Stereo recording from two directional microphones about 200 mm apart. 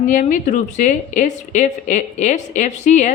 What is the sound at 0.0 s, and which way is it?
Speech, 40° left (ahead or behind).